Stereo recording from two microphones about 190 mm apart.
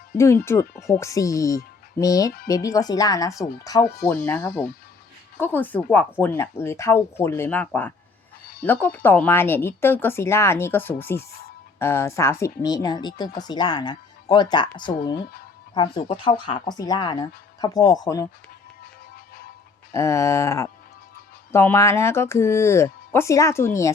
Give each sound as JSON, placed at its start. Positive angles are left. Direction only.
{"t": 0.2, "sound": "speech", "side_deg": 15}
{"t": 11.2, "sound": "speech", "side_deg": 55}
{"t": 11.8, "sound": "speech", "side_deg": 15}
{"t": 19.9, "sound": "speech", "side_deg": 15}